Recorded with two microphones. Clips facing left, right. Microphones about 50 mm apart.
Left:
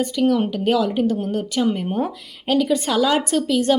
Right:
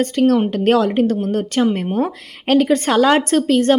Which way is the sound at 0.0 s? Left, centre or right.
Right.